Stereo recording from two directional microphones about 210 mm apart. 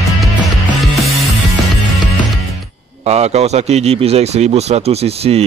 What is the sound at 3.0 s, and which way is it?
Speech, 30° right (ahead or behind).